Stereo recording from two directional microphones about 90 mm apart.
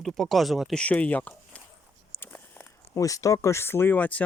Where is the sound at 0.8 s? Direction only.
15° left (ahead or behind).